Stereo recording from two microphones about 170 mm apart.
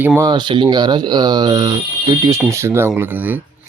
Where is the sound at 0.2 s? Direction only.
25° right (ahead or behind).